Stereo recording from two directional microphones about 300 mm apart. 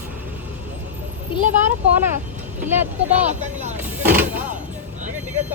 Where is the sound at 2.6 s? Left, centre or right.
Centre.